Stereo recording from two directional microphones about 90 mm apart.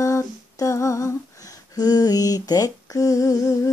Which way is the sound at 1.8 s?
45° left (ahead or behind).